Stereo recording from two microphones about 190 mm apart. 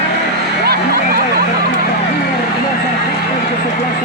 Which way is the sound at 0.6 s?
55° right (ahead or behind).